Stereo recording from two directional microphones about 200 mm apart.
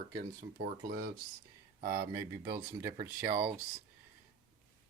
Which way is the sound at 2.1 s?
15° right (ahead or behind).